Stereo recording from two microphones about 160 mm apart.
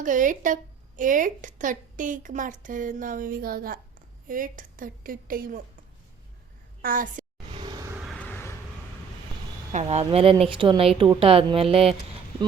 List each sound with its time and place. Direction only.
0.0 s a woman's voice: 55° right (ahead or behind)
6.8 s a child's voice: 60° right (ahead or behind)
7.5 s a sound: 25° right (ahead or behind)
8.0 s vehicle: 5° left (ahead or behind)
9.7 s speech: 40° right (ahead or behind)